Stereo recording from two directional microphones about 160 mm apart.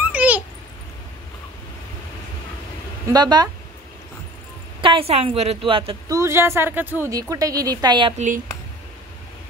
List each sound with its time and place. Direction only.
0.0 s babbling: 10° right (ahead or behind)
3.1 s a woman's voice: 25° right (ahead or behind)
4.8 s a woman's voice: 35° right (ahead or behind)
6.0 s a woman's voice: 20° right (ahead or behind)